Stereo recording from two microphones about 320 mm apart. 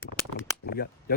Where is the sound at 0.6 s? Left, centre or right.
Left.